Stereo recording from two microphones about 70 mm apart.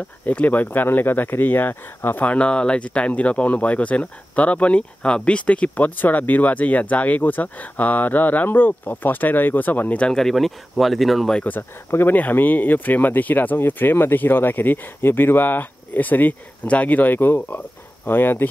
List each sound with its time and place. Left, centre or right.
0.2 s speech: left
2.2 s speech: centre
10.1 s speech: centre
11.9 s speech: left